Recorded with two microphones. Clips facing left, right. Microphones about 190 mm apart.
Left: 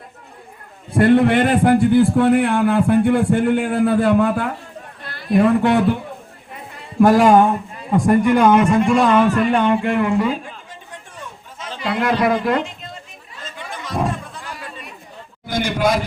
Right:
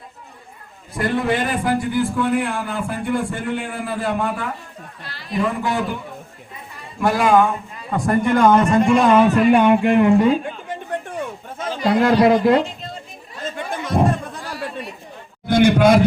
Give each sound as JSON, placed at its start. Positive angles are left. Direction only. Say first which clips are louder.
{"t": 0.9, "sound": "a man's voice", "louder": "left 7 dB", "side_deg": 60}
{"t": 7.0, "sound": "speech", "louder": "left 4 dB", "side_deg": 45}
{"t": 7.9, "sound": "a man's voice", "louder": "left 4 dB", "side_deg": 20}
{"t": 8.9, "sound": "speech", "louder": "right 3 dB", "side_deg": 0}
{"t": 9.2, "sound": "speech", "louder": "right 3 dB", "side_deg": -15}
{"t": 10.4, "sound": "chatter", "louder": "right 8 dB", "side_deg": -60}
{"t": 11.8, "sound": "speech", "louder": "right 4 dB", "side_deg": -35}
{"t": 13.4, "sound": "a sound", "louder": "right 6 dB", "side_deg": -55}
{"t": 15.4, "sound": "a man's voice", "louder": "right 6 dB", "side_deg": -60}